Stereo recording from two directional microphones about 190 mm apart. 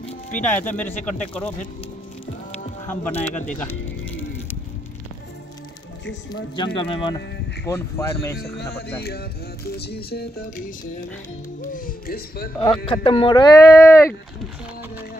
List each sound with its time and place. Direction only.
0.4 s speech: 10° left (ahead or behind)
2.9 s speech: 10° left (ahead or behind)
3.5 s music: 10° left (ahead or behind)
6.5 s speech: 25° left (ahead or behind)
7.6 s speech: 15° left (ahead or behind)
8.5 s speech: 55° left (ahead or behind)
11.7 s speech: 50° left (ahead or behind)
12.5 s speech: 25° left (ahead or behind)